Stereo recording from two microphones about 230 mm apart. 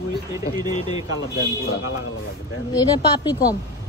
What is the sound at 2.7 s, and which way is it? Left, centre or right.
Speech, centre.